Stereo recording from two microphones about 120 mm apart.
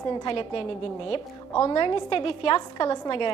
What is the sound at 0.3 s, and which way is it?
A woman's voice, 50° left (ahead or behind).